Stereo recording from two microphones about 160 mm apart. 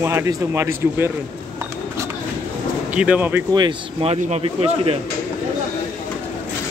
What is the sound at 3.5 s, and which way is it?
A man's voice, 30° right (ahead or behind).